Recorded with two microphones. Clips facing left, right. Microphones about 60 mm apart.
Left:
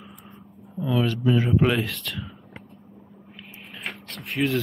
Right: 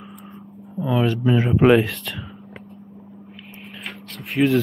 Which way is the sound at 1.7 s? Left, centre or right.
Centre.